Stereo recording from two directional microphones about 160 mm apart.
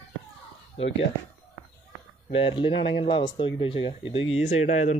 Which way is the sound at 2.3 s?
35° left (ahead or behind).